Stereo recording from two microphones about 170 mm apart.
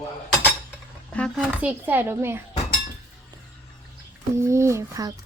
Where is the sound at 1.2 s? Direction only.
5° left (ahead or behind).